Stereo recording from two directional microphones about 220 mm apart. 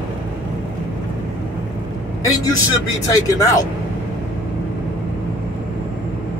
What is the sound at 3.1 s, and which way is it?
Speech, 15° left (ahead or behind).